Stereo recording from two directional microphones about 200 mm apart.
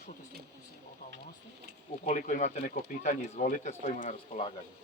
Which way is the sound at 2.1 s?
35° left (ahead or behind).